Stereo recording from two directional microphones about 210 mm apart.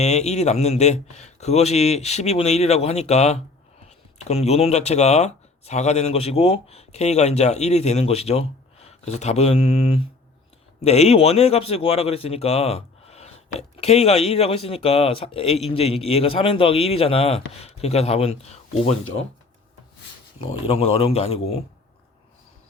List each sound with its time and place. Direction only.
0.0 s speech: 30° left (ahead or behind)
20.4 s speech: 30° left (ahead or behind)